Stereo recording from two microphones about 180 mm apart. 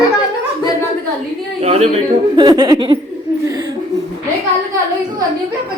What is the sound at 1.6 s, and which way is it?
Speech, 35° right (ahead or behind).